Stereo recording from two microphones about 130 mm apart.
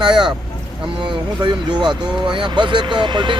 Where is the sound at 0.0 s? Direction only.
35° right (ahead or behind).